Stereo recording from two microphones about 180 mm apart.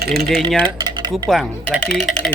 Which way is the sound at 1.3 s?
Centre (ahead or behind).